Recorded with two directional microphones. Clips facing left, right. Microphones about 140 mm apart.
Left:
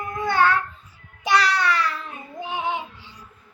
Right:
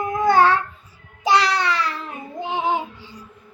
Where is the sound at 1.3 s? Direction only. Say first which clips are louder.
Right 2 dB; 25° right (ahead or behind).